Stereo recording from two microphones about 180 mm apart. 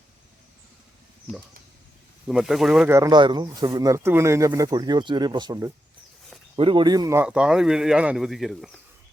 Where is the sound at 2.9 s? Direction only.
20° right (ahead or behind).